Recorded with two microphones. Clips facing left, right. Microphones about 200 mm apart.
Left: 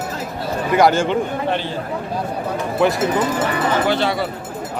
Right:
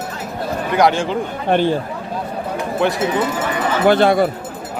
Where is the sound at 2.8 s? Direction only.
Centre (ahead or behind).